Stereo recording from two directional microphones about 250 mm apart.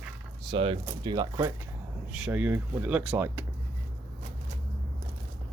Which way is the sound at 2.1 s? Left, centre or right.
Centre.